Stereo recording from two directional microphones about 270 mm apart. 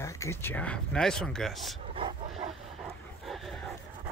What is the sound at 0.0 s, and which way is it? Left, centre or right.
Speech, centre.